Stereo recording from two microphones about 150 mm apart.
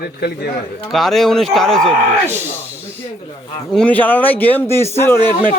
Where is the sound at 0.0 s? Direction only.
90° left.